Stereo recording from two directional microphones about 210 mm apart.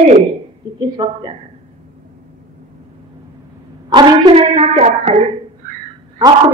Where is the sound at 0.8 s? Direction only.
20° right (ahead or behind).